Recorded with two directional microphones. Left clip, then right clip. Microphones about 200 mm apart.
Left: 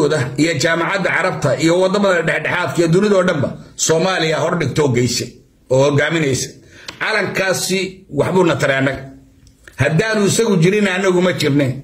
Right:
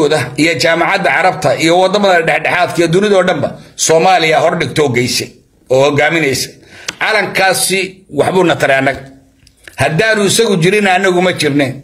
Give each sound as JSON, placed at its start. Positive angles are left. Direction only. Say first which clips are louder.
{"t": 0.0, "sound": "a man's voice", "louder": "right 5 dB", "side_deg": 10}